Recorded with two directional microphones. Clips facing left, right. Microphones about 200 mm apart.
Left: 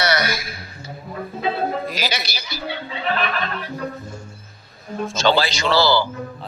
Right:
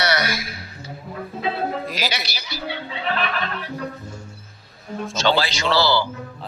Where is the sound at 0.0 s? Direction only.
45° left (ahead or behind).